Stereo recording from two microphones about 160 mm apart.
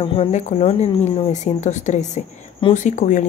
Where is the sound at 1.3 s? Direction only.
45° left (ahead or behind).